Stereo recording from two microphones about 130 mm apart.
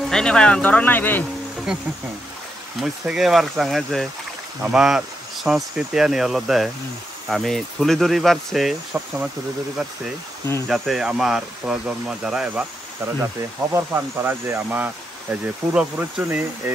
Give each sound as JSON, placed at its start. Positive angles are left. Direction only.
{"t": 0.1, "sound": "speech", "side_deg": 5}
{"t": 1.7, "sound": "speech", "side_deg": 0}
{"t": 13.0, "sound": "speech", "side_deg": -20}